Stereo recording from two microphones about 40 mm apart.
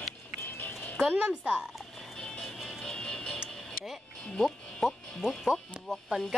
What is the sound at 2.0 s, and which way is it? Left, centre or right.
Music, centre.